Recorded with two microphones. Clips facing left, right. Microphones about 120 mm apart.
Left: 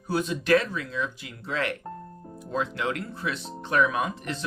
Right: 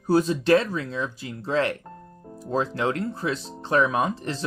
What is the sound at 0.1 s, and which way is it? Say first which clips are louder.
Speech: right 4 dB; 35° right (ahead or behind).